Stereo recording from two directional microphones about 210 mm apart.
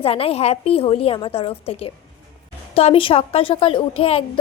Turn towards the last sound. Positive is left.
turn(degrees=25)  # may be behind; listen again after turning